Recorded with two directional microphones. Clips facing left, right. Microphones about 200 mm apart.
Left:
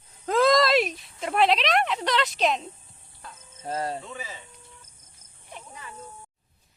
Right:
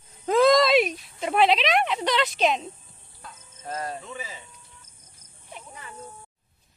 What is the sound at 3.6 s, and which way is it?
Speech, 30° left (ahead or behind).